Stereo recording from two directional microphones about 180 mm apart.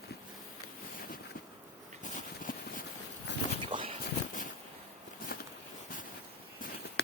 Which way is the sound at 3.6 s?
30° right (ahead or behind).